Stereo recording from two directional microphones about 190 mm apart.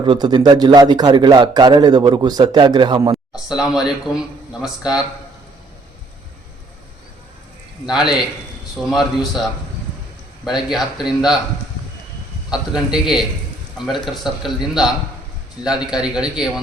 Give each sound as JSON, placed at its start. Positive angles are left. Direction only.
{"t": 0.0, "sound": "a man's voice", "side_deg": -25}
{"t": 3.3, "sound": "a man's voice", "side_deg": 0}
{"t": 8.7, "sound": "a man's voice", "side_deg": 0}
{"t": 12.5, "sound": "a man's voice", "side_deg": -5}